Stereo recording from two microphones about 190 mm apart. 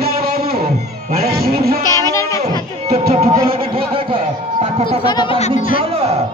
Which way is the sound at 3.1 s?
35° right (ahead or behind).